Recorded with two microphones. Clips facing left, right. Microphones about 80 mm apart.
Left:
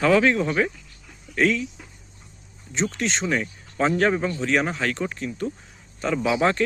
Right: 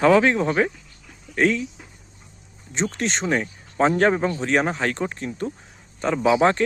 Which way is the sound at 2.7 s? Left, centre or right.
Right.